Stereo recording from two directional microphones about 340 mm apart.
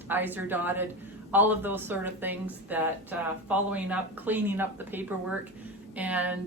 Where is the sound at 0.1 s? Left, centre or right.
Centre.